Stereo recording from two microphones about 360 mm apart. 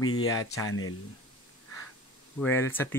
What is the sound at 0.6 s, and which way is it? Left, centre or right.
Speech, left.